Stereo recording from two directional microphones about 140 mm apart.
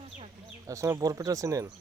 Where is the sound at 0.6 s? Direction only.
20° right (ahead or behind).